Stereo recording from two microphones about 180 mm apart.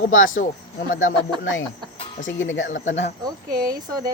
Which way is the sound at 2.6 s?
45° left (ahead or behind).